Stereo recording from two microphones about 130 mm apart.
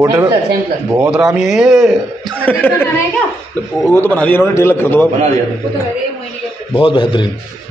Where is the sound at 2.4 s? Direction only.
10° left (ahead or behind).